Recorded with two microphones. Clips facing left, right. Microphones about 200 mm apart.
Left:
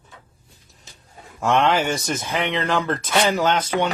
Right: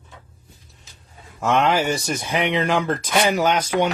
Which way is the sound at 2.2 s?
15° right (ahead or behind).